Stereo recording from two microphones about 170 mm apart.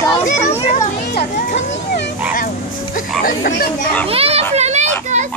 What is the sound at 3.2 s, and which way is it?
Speech, 55° left (ahead or behind).